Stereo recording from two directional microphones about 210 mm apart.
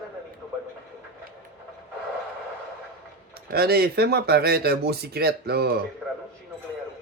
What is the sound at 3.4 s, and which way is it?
Speech, 50° right (ahead or behind).